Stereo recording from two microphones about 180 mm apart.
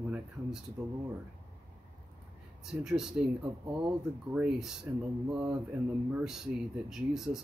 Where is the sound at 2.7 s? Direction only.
5° right (ahead or behind).